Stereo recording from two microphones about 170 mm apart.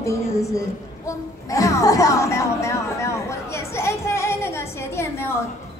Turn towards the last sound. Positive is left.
turn(degrees=15)  # may be behind; listen again after turning